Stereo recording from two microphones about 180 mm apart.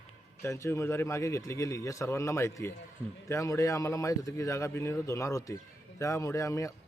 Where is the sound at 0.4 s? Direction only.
15° left (ahead or behind).